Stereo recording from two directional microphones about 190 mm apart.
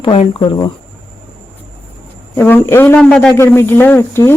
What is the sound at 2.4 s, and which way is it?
A man's voice, 10° left (ahead or behind).